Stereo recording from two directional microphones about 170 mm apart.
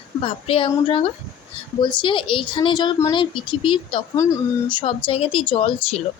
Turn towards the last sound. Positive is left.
turn(degrees=35)  # may be behind; listen again after turning